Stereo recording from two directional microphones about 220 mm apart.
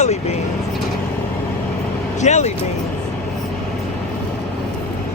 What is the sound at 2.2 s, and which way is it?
Speech, 30° left (ahead or behind).